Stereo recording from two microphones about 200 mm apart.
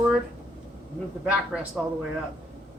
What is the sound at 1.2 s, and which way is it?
Speech, 5° right (ahead or behind).